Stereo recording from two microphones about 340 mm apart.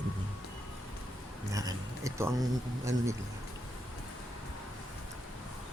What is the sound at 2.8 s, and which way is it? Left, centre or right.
Speech, centre.